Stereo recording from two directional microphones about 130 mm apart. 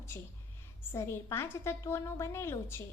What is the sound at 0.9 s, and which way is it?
A woman's voice, 20° left (ahead or behind).